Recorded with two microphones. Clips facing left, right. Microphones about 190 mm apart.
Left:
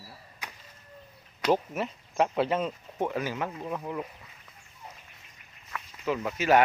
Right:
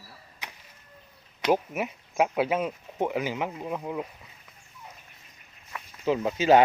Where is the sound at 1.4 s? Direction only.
10° right (ahead or behind).